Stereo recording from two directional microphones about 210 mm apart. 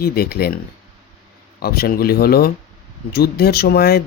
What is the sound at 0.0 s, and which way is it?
Speech, 45° left (ahead or behind).